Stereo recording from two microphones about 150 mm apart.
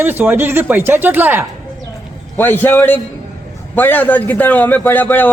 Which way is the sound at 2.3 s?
15° left (ahead or behind).